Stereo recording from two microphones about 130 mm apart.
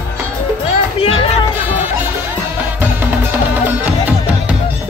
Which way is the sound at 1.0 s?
45° left (ahead or behind).